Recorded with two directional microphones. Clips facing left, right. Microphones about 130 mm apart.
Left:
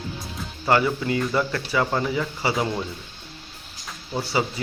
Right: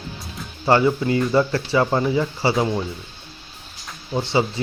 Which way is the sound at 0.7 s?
25° right (ahead or behind).